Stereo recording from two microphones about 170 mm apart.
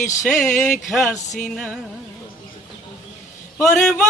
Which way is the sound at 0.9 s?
Centre (ahead or behind).